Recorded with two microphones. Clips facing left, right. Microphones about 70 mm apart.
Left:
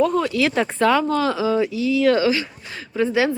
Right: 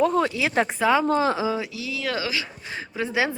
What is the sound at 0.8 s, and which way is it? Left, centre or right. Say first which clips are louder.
Speech: left 4 dB; centre.